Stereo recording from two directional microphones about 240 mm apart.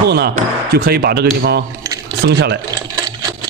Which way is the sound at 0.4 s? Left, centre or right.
Right.